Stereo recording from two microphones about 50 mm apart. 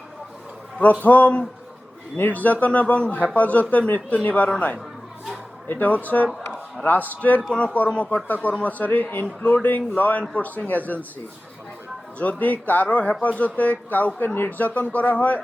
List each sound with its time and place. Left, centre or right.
1.0 s speech: left
2.1 s a man's voice: left
5.8 s a man's voice: left
9.4 s speech: left
9.6 s a man's voice: left
12.2 s a man's voice: left
14.7 s a man's voice: left